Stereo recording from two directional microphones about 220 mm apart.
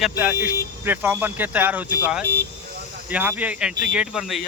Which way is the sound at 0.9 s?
10° right (ahead or behind).